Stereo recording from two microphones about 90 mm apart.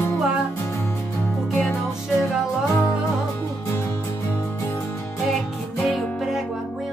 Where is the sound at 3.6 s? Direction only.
30° left (ahead or behind).